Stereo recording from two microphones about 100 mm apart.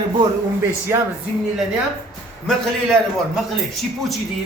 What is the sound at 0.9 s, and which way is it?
Speech, 25° right (ahead or behind).